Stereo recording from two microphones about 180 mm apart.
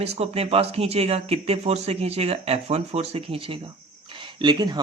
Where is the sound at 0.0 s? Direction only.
35° right (ahead or behind).